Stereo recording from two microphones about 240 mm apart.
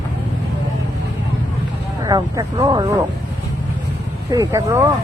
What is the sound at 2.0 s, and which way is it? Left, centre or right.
Speech, centre.